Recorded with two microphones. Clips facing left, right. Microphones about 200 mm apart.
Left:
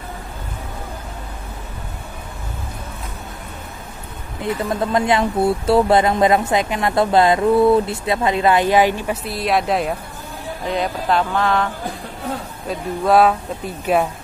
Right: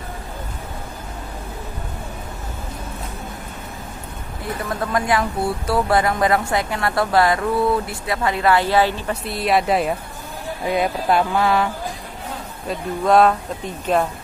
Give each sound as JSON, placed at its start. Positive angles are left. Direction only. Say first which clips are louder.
{"t": 4.4, "sound": "speech", "louder": "left 5 dB", "side_deg": 25}
{"t": 9.2, "sound": "speech", "louder": "right 2 dB", "side_deg": 0}
{"t": 10.6, "sound": "music", "louder": "right 2 dB", "side_deg": -10}
{"t": 12.6, "sound": "speech", "louder": "even", "side_deg": 5}